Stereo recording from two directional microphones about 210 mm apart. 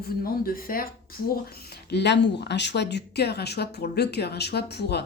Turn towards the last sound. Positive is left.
turn(degrees=50)  # may be behind; listen again after turning